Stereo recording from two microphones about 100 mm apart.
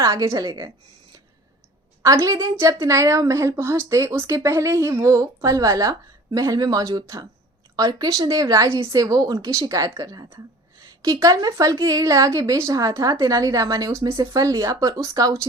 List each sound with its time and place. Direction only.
0.0 s a woman's voice: 35° right (ahead or behind)
2.0 s a woman's voice: 35° right (ahead or behind)